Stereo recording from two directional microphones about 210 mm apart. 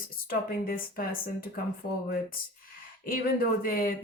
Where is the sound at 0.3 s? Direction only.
45° left (ahead or behind).